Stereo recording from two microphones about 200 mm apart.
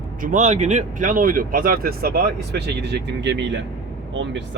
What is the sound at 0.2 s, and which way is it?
Speech, 40° right (ahead or behind).